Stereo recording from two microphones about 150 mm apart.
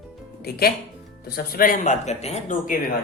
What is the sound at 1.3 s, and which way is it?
Speech, 80° left.